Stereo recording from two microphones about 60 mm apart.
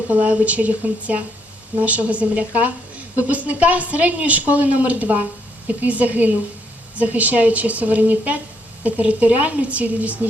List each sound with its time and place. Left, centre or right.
0.1 s speech: right